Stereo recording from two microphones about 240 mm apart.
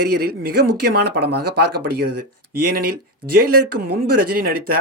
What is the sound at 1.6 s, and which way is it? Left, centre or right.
Speech, right.